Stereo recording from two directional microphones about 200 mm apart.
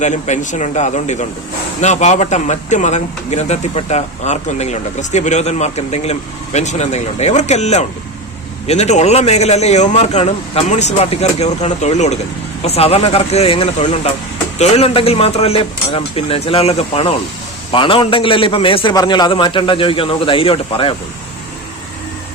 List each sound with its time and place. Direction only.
0.0 s a man's voice: 35° left (ahead or behind)